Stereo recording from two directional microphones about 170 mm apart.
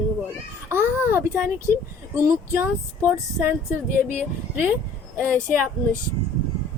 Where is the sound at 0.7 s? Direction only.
15° right (ahead or behind).